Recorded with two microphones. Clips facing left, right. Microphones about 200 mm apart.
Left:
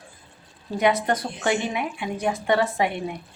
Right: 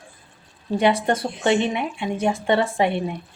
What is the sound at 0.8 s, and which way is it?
Speech, 30° right (ahead or behind).